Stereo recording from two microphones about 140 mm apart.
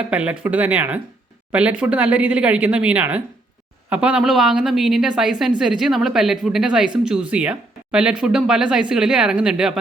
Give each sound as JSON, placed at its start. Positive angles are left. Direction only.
{"t": 0.1, "sound": "a woman's voice", "side_deg": -10}